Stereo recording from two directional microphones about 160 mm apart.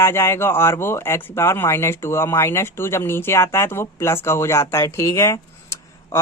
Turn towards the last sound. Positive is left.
turn(degrees=15)  # may be behind; listen again after turning